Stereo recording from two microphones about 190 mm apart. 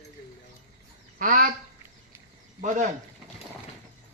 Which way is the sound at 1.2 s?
45° right (ahead or behind).